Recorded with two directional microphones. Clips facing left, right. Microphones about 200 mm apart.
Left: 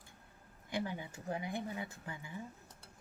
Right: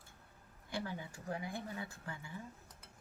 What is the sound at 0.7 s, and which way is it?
Speech, 20° left (ahead or behind).